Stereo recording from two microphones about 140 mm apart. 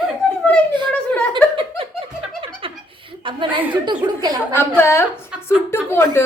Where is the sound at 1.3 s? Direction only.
40° right (ahead or behind).